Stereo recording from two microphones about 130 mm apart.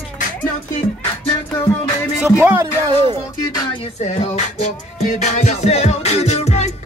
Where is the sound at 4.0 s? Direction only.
60° left (ahead or behind).